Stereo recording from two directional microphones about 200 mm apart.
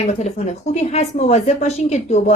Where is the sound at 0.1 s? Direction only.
35° left (ahead or behind).